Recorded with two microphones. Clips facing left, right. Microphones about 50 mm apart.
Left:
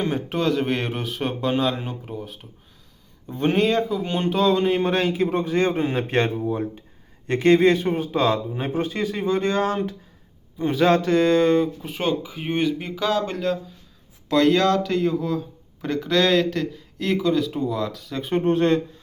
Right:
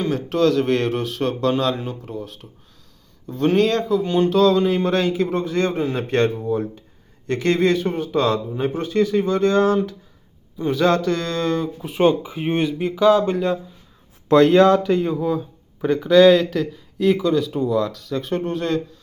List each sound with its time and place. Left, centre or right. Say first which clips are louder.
0.0 s speech: right 4 dB; centre
11.6 s speech: left 1 dB; centre
11.9 s speech: right 8 dB; centre
12.5 s speech: right 2 dB; centre
14.3 s speech: right 5 dB; right; by 18.4 s centre
18.4 s a man's voice: left 8 dB; left